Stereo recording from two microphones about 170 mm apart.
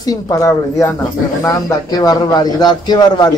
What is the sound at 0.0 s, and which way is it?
Speech, 20° left (ahead or behind).